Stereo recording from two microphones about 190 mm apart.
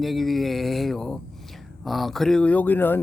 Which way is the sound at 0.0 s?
Centre (ahead or behind).